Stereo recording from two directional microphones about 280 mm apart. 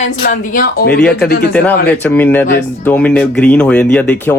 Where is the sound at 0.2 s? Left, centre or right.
Left.